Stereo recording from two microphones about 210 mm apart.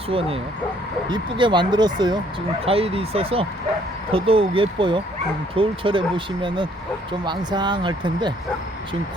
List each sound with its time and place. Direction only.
0.1 s speech: 25° right (ahead or behind)